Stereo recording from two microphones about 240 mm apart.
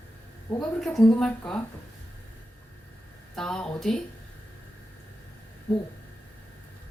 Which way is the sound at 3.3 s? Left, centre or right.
Centre.